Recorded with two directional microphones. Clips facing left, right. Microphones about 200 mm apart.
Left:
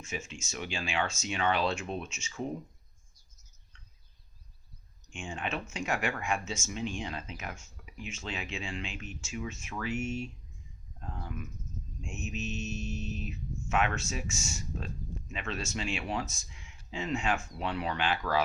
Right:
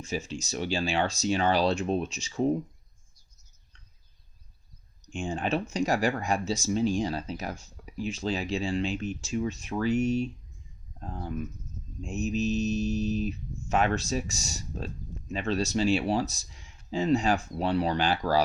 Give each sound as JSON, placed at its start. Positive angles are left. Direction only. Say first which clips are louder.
{"t": 0.0, "sound": "speech", "louder": "right 7 dB", "side_deg": -35}
{"t": 5.0, "sound": "speech", "louder": "right 7 dB", "side_deg": -35}